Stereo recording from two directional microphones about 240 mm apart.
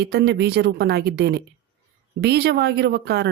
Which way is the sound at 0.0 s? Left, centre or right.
Right.